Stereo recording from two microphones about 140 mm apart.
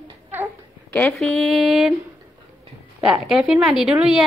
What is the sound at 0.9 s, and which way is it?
A woman's voice, 5° left (ahead or behind).